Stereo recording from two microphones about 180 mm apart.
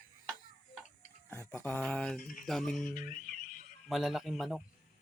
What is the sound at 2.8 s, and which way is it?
Music, 45° left (ahead or behind).